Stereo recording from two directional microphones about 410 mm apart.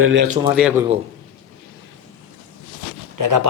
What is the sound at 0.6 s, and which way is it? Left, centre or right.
Speech, centre.